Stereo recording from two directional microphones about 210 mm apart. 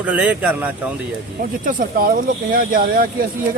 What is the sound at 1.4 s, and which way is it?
Speech, 40° right (ahead or behind).